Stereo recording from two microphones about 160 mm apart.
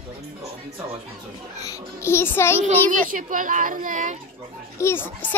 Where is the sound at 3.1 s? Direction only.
55° right (ahead or behind).